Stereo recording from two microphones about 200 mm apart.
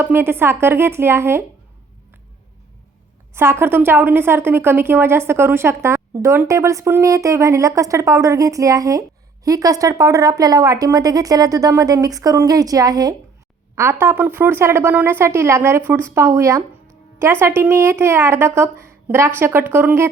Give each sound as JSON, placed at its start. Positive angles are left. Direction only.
{"t": 0.0, "sound": "a woman's voice", "side_deg": -10}
{"t": 3.3, "sound": "a woman's voice", "side_deg": -10}